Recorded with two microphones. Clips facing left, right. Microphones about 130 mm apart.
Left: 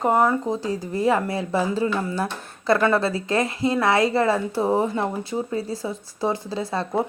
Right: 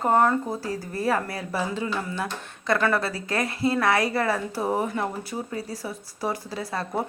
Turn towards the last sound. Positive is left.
turn(degrees=25)  # may be behind; listen again after turning